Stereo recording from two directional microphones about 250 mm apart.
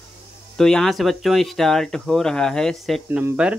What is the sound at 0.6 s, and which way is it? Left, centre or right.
Speech, centre.